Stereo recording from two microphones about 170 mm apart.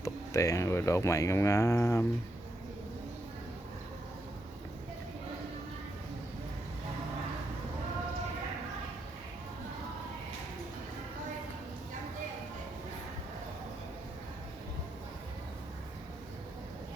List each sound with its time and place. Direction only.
0.0 s speech: 20° left (ahead or behind)